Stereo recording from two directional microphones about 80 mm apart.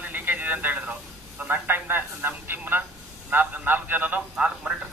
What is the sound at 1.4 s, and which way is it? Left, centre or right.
Speech, right.